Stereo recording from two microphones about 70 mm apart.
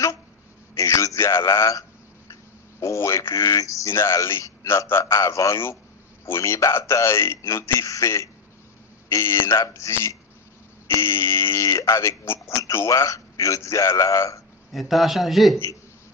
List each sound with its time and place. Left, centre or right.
0.7 s a sound: left
1.2 s a man's voice: left
14.7 s a man's voice: centre